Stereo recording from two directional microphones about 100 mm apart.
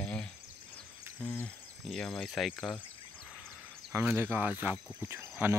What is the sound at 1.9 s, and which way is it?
Speech, 5° left (ahead or behind).